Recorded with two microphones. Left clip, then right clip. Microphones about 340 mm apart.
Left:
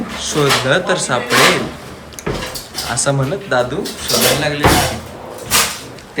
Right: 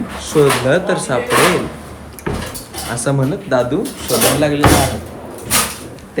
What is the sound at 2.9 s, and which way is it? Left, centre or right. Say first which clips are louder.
Speech: even; centre.